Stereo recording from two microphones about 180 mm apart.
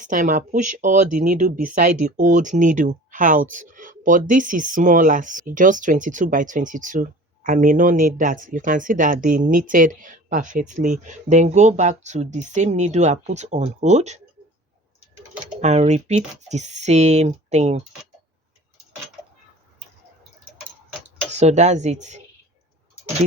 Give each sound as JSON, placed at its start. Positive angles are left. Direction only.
{"t": 0.0, "sound": "speech", "side_deg": -45}
{"t": 15.6, "sound": "speech", "side_deg": -40}
{"t": 21.3, "sound": "speech", "side_deg": -40}